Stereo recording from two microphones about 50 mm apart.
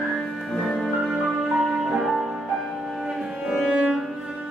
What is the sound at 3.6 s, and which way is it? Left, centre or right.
Music, right.